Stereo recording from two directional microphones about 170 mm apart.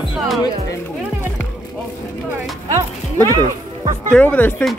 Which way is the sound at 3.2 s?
25° right (ahead or behind).